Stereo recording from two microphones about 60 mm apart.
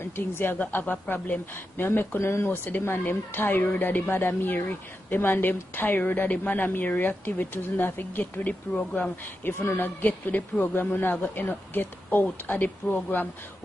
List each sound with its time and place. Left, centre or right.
0.0 s a woman's voice: left
4.1 s a woman's voice: left
9.4 s a woman's voice: left
10.0 s a woman's voice: left